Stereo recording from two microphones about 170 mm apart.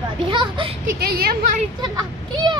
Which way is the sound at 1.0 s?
65° right (ahead or behind).